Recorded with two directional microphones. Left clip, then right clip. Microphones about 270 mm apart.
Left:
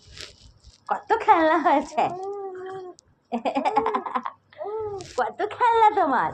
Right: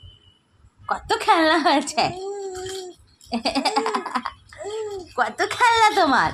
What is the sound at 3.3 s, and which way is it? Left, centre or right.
Sheep, right.